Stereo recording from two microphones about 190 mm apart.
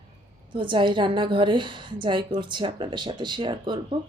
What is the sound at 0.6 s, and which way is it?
Speech, 25° right (ahead or behind).